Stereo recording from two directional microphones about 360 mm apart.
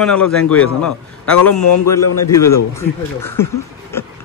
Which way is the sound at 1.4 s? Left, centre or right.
Centre.